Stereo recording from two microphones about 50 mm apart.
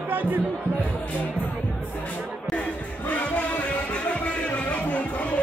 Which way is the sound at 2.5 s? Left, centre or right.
Left.